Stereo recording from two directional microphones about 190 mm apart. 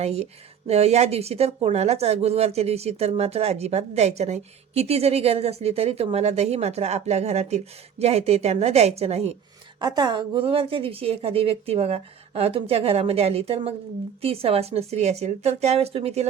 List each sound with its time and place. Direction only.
0.0 s speech: 35° right (ahead or behind)
9.8 s speech: 20° right (ahead or behind)